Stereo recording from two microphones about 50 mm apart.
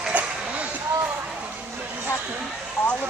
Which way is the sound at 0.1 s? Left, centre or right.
Right.